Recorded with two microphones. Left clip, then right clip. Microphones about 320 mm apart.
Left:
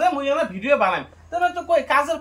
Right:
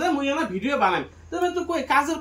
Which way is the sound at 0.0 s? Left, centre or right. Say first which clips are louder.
Left 4 dB; centre.